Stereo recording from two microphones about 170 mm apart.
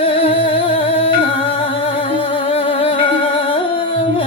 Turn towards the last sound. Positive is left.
turn(degrees=30)  # may be behind; listen again after turning